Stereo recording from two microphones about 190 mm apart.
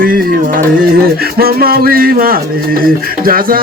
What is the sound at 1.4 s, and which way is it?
Speech, 55° right (ahead or behind).